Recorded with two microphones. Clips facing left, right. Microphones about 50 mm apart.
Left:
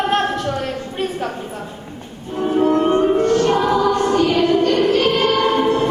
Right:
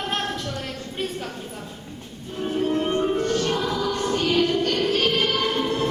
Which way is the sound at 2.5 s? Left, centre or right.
Left.